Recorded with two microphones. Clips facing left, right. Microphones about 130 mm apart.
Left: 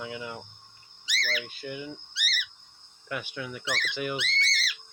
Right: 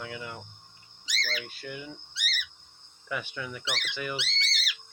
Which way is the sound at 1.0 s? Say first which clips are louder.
Left 2 dB; 40° right (ahead or behind).